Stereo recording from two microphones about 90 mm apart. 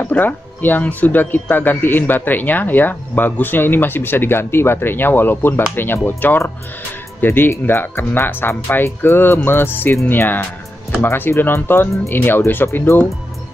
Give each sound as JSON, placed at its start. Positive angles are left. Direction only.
{"t": 0.0, "sound": "speech", "side_deg": 20}